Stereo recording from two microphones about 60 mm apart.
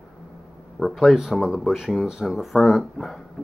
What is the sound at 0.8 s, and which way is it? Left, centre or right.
Speech, centre.